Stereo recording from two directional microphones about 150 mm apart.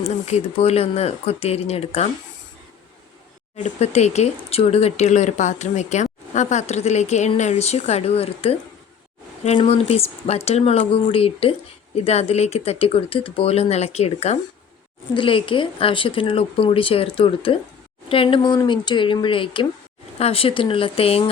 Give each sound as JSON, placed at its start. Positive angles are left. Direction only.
{"t": 0.0, "sound": "speech", "side_deg": 45}
{"t": 3.6, "sound": "speech", "side_deg": 50}
{"t": 9.6, "sound": "speech", "side_deg": 45}
{"t": 15.1, "sound": "speech", "side_deg": 35}